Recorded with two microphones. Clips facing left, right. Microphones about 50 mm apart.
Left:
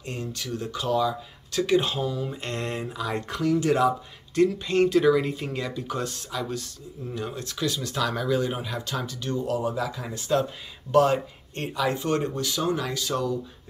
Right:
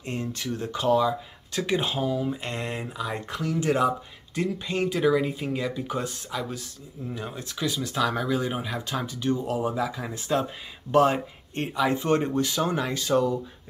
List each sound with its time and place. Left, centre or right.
0.0 s speech: right
4.4 s speech: centre
5.9 s speech: centre